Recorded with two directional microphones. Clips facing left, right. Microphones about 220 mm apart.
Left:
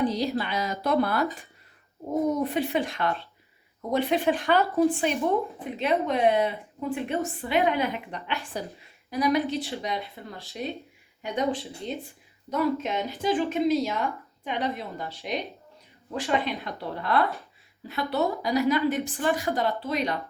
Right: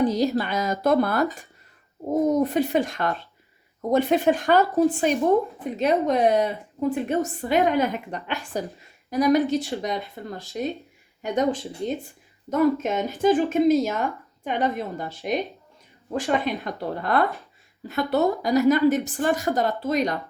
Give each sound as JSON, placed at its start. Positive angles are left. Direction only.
{"t": 0.0, "sound": "a woman's voice", "side_deg": -45}